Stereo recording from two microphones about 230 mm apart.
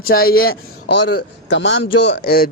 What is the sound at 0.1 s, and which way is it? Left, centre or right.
A man's voice, left.